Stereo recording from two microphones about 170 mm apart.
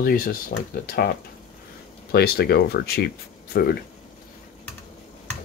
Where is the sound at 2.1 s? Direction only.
70° left (ahead or behind).